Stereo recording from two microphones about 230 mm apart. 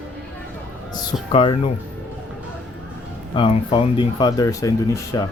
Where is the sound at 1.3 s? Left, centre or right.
Left.